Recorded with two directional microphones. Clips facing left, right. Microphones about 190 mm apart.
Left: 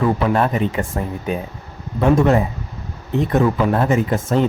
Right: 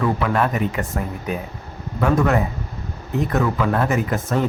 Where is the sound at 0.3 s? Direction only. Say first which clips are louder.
Left 2 dB; 30° left (ahead or behind).